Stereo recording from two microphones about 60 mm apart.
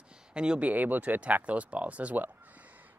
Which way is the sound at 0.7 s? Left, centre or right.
Right.